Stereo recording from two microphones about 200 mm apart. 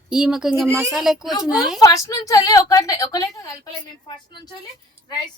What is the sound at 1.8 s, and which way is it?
A woman's voice, 15° left (ahead or behind).